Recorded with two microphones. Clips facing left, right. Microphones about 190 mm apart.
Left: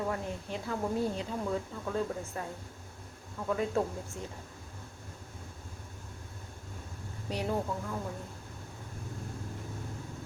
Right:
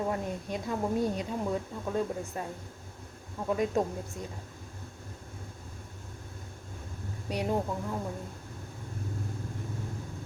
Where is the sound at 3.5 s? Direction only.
15° right (ahead or behind).